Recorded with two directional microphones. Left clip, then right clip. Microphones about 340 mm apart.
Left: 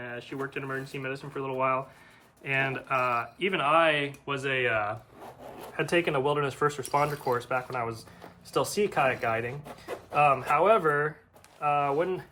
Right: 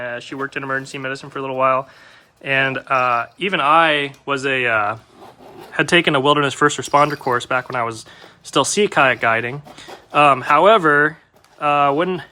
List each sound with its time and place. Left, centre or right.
0.0 s speech: centre